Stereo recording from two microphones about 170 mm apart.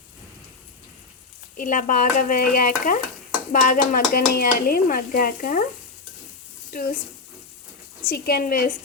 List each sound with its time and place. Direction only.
1.5 s stir: 50° left (ahead or behind)
3.5 s speech: 50° left (ahead or behind)
8.0 s speech: 65° left (ahead or behind)